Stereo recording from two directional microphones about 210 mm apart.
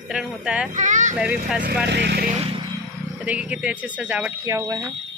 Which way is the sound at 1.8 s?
55° right (ahead or behind).